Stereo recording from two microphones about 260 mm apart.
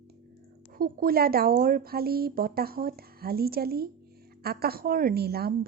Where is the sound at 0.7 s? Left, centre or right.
Right.